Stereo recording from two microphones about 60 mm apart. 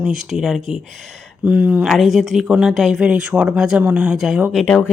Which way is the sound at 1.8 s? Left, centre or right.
Centre.